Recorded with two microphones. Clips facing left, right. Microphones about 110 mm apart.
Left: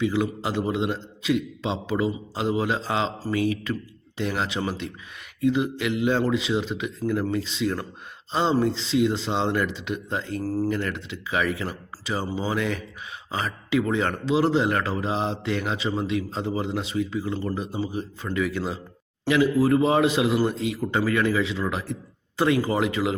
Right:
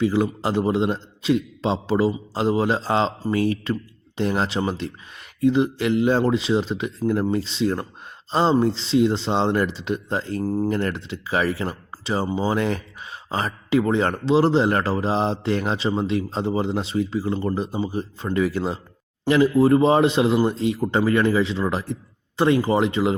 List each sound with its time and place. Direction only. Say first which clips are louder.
0.0 s speech: right 3 dB; 35° right (ahead or behind)
10.4 s a man's voice: right 2 dB; 20° right (ahead or behind)
10.7 s a man's voice: right 3 dB; 35° right (ahead or behind)